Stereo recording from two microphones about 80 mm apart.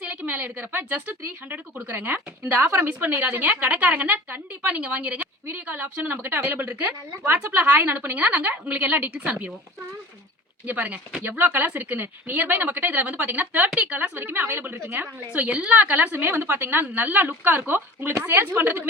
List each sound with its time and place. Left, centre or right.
0.0 s a woman's voice: centre
10.7 s a woman's voice: centre